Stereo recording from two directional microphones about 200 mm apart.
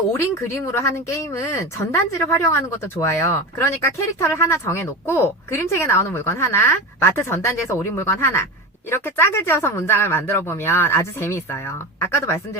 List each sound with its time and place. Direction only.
0.1 s speech: 15° left (ahead or behind)